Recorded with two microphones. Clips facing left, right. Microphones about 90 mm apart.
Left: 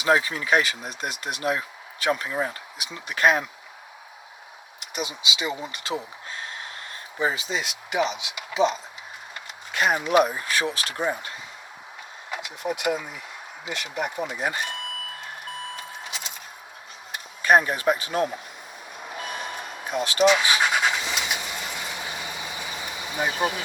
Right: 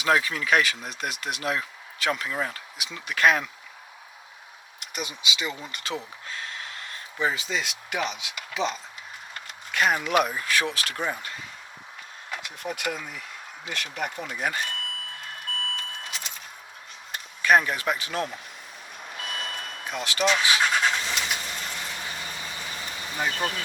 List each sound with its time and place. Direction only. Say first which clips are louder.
0.0 s speech: left 2 dB; 25° left (ahead or behind)
4.8 s speech: left 3 dB; 20° left (ahead or behind)
6.2 s gasp: left 1 dB; 30° left (ahead or behind)
7.3 s speech: even; 20° left (ahead or behind)
11.0 s speech: left 5 dB; 20° left (ahead or behind)
15.7 s vehicle: left 1 dB; 20° left (ahead or behind)
17.4 s speech: left 2 dB; 30° left (ahead or behind)
19.1 s vehicle: left 2 dB; 15° left (ahead or behind)
20.0 s speech: left 6 dB; 25° left (ahead or behind)
20.6 s vehicle: left 1 dB; 15° left (ahead or behind)